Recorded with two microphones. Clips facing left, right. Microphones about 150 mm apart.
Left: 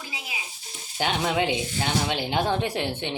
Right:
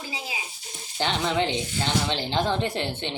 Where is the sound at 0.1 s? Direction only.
30° right (ahead or behind).